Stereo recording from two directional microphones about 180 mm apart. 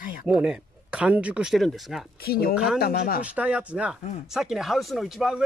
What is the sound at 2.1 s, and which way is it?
Speech, 60° left (ahead or behind).